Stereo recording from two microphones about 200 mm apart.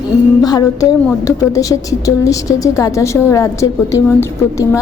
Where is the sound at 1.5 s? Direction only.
15° left (ahead or behind).